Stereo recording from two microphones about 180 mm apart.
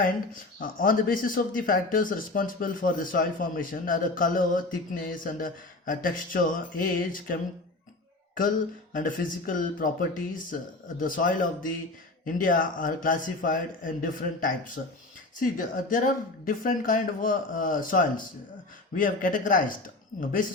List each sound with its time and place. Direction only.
0.6 s speech: 50° left (ahead or behind)
8.4 s speech: 50° left (ahead or behind)